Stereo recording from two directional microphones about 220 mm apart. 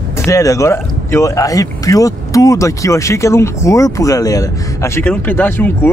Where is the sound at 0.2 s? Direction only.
15° left (ahead or behind).